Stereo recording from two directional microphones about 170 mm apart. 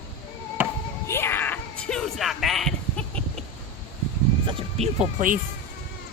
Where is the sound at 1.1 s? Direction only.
15° left (ahead or behind).